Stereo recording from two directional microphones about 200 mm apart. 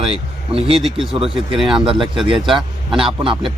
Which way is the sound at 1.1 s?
25° right (ahead or behind).